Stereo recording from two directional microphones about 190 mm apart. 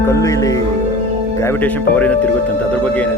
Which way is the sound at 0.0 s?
15° left (ahead or behind).